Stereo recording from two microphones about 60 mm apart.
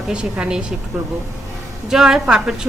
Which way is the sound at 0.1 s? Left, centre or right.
Centre.